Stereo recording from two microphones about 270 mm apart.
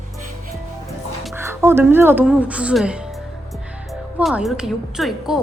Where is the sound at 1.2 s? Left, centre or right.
Centre.